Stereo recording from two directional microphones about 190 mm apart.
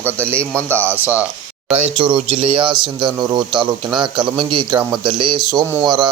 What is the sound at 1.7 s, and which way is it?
Speech, 25° right (ahead or behind).